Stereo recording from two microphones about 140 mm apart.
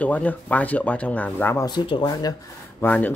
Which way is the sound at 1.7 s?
35° left (ahead or behind).